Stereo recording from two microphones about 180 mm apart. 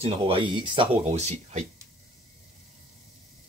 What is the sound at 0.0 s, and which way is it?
Speech, 30° right (ahead or behind).